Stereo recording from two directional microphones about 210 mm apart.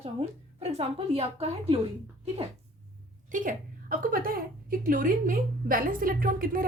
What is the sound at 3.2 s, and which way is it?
A woman's voice, 40° right (ahead or behind).